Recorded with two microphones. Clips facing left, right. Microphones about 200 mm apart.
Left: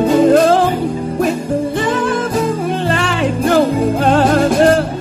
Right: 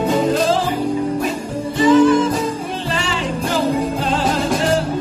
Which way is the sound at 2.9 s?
60° left (ahead or behind).